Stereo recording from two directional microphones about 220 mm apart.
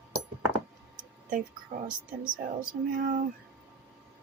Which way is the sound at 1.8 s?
40° right (ahead or behind).